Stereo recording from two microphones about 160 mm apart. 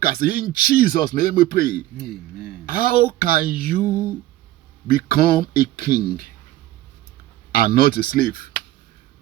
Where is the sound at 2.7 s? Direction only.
65° left (ahead or behind).